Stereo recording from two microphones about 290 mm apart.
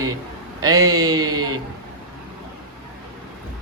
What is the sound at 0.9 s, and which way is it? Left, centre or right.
Speech, centre.